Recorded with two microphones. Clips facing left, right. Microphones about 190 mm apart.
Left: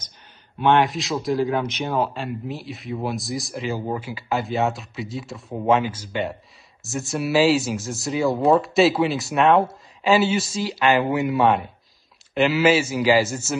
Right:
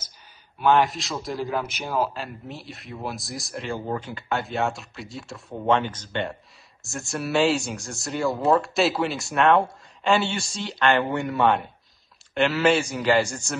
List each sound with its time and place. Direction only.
0.6 s speech: centre (ahead or behind)